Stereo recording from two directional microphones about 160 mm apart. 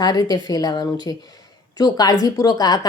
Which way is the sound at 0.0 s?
25° left (ahead or behind).